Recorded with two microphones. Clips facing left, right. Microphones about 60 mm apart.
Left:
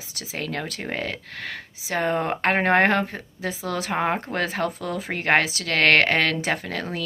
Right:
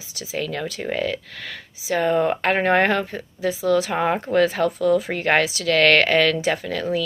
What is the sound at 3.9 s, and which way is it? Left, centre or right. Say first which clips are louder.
Speech: right 2 dB; left.